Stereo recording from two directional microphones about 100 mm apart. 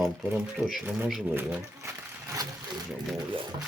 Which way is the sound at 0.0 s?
Centre (ahead or behind).